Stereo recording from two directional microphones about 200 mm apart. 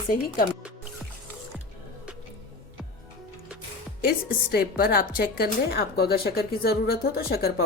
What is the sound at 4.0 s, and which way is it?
Speech, 50° left (ahead or behind).